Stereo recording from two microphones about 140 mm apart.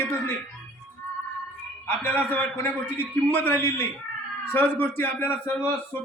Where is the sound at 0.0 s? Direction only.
15° left (ahead or behind).